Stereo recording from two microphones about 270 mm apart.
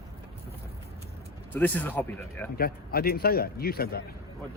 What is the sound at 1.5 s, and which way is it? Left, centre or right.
Speech, centre.